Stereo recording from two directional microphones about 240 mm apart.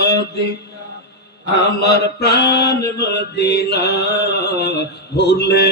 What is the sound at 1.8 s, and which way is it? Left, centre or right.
Mantra, left.